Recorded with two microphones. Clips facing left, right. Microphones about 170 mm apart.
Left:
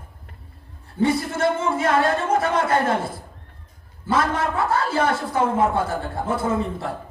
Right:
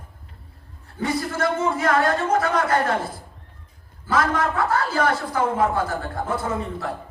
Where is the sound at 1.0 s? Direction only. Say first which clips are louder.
Left 3 dB; 25° left (ahead or behind).